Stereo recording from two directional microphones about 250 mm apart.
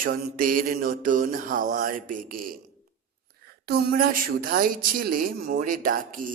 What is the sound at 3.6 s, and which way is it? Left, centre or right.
Speech, right.